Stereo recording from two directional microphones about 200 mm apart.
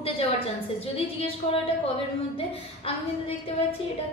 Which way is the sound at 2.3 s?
30° left (ahead or behind).